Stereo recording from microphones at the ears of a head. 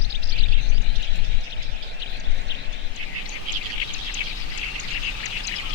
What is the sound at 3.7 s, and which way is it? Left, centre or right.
Bird, left.